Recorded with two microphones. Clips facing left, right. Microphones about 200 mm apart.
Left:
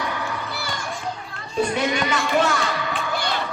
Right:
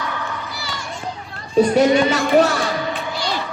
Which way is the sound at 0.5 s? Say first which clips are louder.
Left 1 dB; 55° left (ahead or behind).